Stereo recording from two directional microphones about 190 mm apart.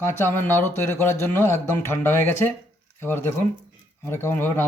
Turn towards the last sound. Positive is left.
turn(degrees=10)  # may be behind; listen again after turning